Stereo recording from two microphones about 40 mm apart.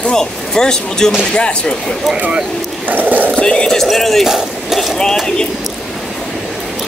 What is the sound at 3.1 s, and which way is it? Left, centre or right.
Speech, right.